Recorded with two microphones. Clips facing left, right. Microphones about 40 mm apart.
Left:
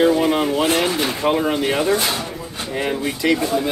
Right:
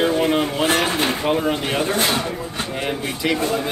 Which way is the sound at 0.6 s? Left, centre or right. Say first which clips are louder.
Even; right.